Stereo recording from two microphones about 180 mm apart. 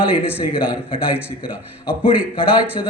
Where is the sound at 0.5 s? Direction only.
30° left (ahead or behind).